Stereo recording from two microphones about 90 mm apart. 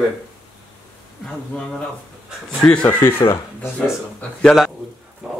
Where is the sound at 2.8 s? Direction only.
25° left (ahead or behind).